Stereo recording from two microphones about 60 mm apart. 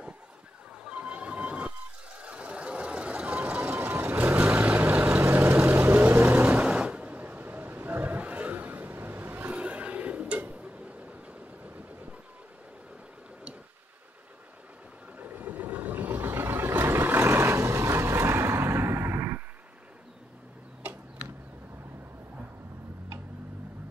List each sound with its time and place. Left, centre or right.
0.8 s a sound: centre
2.1 s vehicle: centre
3.3 s a sound: right
3.9 s vehicle: right
4.6 s vehicle: right
5.4 s vehicle: right
6.6 s a sound: centre
11.6 s vehicle: right
15.1 s vehicle: right